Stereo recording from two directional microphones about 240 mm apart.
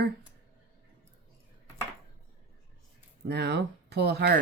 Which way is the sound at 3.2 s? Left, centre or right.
Right.